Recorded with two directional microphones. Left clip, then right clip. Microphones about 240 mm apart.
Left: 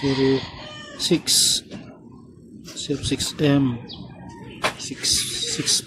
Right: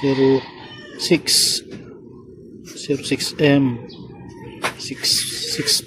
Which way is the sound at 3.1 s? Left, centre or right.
Left.